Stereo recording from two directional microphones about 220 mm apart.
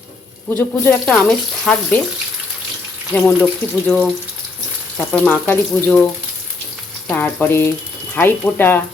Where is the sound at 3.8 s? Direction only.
10° left (ahead or behind).